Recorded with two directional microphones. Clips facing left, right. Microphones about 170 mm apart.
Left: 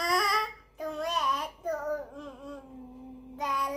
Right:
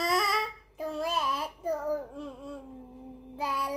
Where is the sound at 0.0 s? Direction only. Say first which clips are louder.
Right 1 dB; centre (ahead or behind).